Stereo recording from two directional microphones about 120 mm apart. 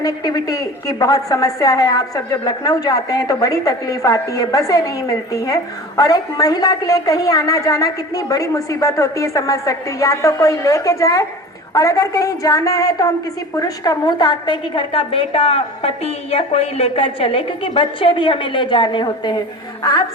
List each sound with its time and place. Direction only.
0.0 s a woman's voice: 30° left (ahead or behind)
19.8 s music: 30° left (ahead or behind)